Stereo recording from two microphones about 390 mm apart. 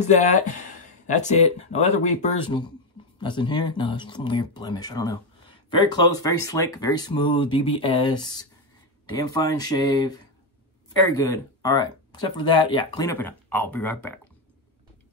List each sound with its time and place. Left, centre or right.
0.0 s speech: centre
11.2 s speech: centre